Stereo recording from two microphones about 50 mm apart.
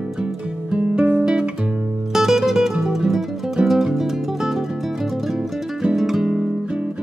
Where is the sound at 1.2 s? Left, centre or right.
Centre.